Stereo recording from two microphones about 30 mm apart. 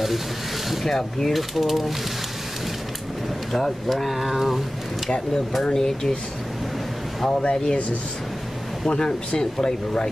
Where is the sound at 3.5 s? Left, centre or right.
Centre.